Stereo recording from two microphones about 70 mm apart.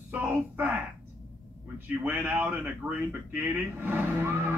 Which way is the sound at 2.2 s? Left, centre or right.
Centre.